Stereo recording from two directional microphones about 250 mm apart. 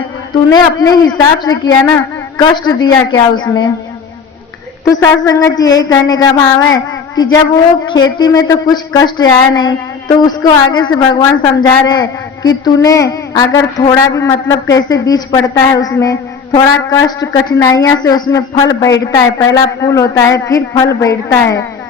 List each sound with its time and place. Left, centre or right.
0.5 s a woman's voice: centre
4.9 s a woman's voice: centre